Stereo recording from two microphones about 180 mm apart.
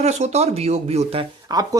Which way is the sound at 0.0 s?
40° right (ahead or behind).